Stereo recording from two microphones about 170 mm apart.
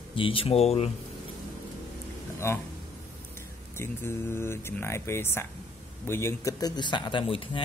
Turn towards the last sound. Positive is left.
turn(degrees=30)  # may be behind; listen again after turning